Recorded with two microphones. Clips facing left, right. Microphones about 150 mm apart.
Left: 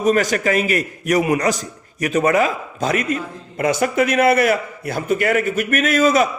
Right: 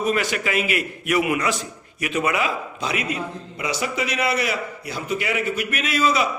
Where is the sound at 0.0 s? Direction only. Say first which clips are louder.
Left 6 dB; 40° left (ahead or behind).